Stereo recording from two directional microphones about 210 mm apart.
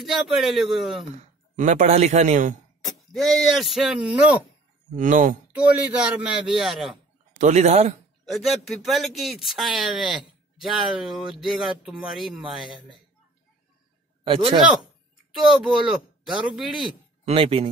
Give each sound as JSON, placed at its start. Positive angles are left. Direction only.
{"t": 0.0, "sound": "speech", "side_deg": 0}
{"t": 1.1, "sound": "speech", "side_deg": -35}
{"t": 2.8, "sound": "speech", "side_deg": 0}
{"t": 4.9, "sound": "a man's voice", "side_deg": -35}
{"t": 5.6, "sound": "speech", "side_deg": -5}
{"t": 7.3, "sound": "a man's voice", "side_deg": -35}
{"t": 8.3, "sound": "speech", "side_deg": 0}
{"t": 14.2, "sound": "speech", "side_deg": -25}
{"t": 15.3, "sound": "speech", "side_deg": 0}
{"t": 17.2, "sound": "speech", "side_deg": -25}